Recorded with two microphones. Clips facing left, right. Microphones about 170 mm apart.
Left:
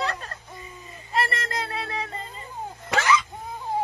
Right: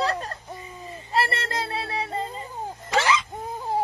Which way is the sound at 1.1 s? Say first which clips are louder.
Right 1 dB; 30° right (ahead or behind).